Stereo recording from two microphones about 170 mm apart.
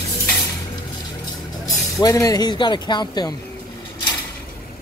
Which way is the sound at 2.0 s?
20° left (ahead or behind).